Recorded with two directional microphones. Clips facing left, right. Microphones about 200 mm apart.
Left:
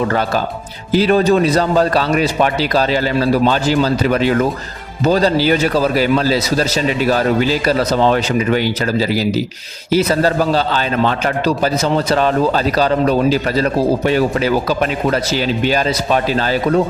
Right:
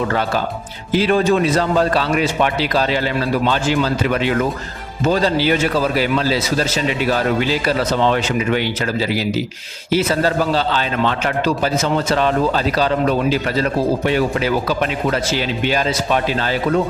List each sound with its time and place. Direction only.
0.9 s a man's voice: 40° left (ahead or behind)